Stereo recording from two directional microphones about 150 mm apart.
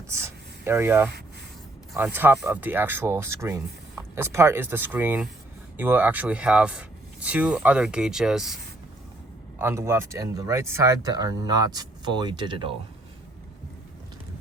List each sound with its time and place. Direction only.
0.1 s speech: 20° right (ahead or behind)
9.6 s speech: 15° right (ahead or behind); by 12.7 s 35° right (ahead or behind)